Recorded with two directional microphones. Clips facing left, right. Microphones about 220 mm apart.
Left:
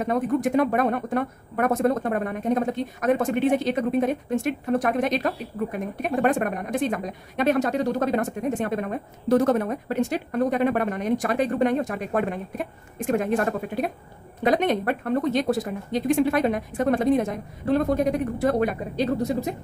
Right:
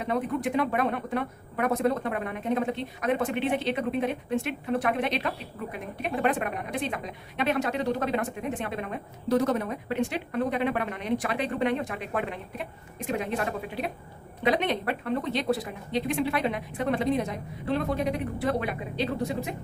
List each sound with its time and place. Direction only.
0.0 s a woman's voice: 45° left (ahead or behind)